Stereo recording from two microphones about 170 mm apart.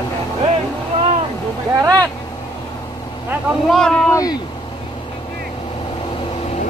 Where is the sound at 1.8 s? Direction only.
20° right (ahead or behind).